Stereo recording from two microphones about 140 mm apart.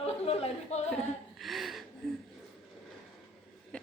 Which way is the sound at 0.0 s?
45° left (ahead or behind).